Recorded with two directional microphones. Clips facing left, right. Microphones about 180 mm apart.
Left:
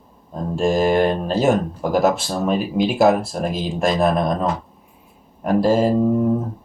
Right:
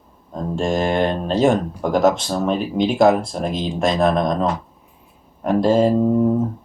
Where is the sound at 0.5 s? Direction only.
5° left (ahead or behind).